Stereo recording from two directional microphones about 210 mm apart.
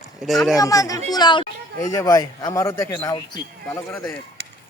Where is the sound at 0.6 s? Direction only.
15° left (ahead or behind).